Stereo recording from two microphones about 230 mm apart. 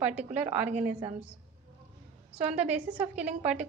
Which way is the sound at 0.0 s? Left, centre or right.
Centre.